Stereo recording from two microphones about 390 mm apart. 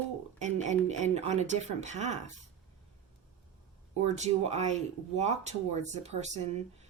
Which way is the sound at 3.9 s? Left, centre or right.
Centre.